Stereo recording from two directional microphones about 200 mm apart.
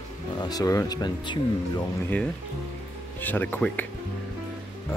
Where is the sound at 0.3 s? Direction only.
20° left (ahead or behind).